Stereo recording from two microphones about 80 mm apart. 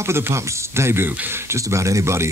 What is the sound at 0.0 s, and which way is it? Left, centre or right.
Speech, right.